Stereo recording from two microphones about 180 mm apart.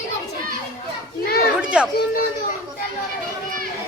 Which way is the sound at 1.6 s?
5° right (ahead or behind).